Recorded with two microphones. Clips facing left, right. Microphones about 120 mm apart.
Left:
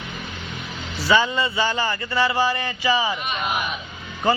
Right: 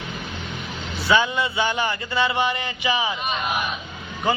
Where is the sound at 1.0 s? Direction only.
Centre (ahead or behind).